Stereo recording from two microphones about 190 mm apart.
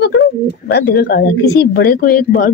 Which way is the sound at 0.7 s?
60° left (ahead or behind).